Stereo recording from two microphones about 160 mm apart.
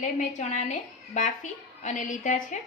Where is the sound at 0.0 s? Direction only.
50° left (ahead or behind).